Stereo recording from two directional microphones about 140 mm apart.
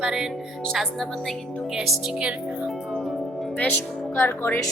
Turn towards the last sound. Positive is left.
turn(degrees=15)  # may be behind; listen again after turning